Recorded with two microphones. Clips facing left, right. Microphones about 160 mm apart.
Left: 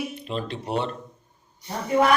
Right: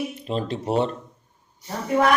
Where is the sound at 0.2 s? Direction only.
40° right (ahead or behind).